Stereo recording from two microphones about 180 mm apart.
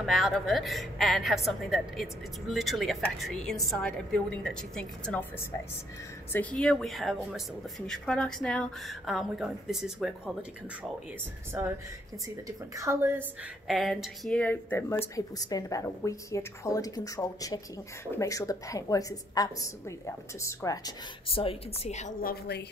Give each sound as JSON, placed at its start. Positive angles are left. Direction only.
{"t": 0.0, "sound": "a woman's voice", "side_deg": 0}
{"t": 11.5, "sound": "a woman's voice", "side_deg": -10}
{"t": 13.7, "sound": "a woman's voice", "side_deg": 0}
{"t": 21.3, "sound": "a woman's voice", "side_deg": 30}
{"t": 22.3, "sound": "a woman's voice", "side_deg": 65}